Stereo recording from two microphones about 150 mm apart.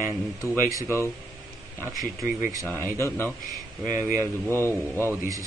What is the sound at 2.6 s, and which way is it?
Speech, 15° left (ahead or behind).